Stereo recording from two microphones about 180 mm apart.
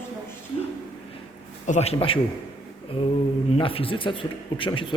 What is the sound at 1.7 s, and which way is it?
Speech, 35° left (ahead or behind).